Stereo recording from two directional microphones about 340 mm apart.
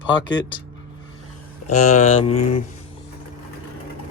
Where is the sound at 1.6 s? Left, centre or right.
Left.